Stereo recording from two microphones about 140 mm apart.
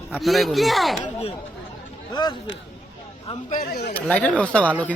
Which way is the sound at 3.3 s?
45° left (ahead or behind).